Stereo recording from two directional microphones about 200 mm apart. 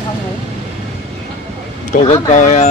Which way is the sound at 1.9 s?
35° left (ahead or behind).